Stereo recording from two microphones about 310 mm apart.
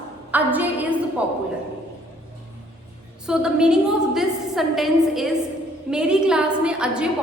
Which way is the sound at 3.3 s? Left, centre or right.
Centre.